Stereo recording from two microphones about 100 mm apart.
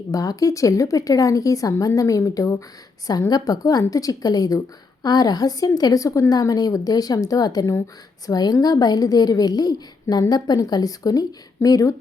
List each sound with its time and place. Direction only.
0.1 s a woman's voice: 35° left (ahead or behind)